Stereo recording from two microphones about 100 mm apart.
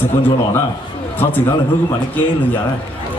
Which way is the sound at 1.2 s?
20° left (ahead or behind).